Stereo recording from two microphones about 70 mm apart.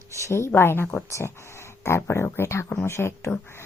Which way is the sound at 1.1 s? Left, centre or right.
Left.